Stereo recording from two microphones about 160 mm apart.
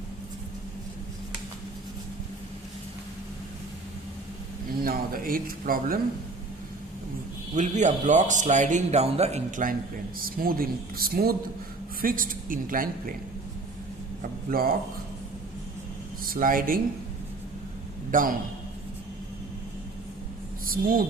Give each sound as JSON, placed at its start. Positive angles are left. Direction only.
{"t": 4.8, "sound": "speech", "side_deg": -65}
{"t": 7.5, "sound": "speech", "side_deg": -50}
{"t": 10.2, "sound": "speech", "side_deg": -65}
{"t": 12.0, "sound": "speech", "side_deg": -60}
{"t": 14.2, "sound": "speech", "side_deg": -65}
{"t": 16.3, "sound": "speech", "side_deg": -60}
{"t": 18.1, "sound": "speech", "side_deg": -60}
{"t": 20.7, "sound": "speech", "side_deg": -60}